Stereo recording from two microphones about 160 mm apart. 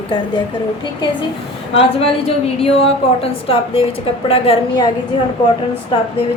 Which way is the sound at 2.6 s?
40° left (ahead or behind).